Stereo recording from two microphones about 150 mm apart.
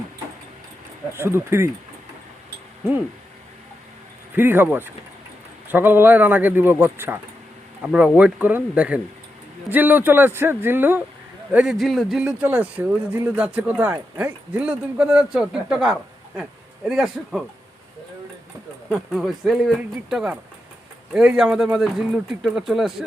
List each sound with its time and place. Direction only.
1.1 s speech: 15° right (ahead or behind)
4.4 s speech: 15° right (ahead or behind)
11.5 s speech: 5° right (ahead or behind)
18.9 s speech: centre (ahead or behind)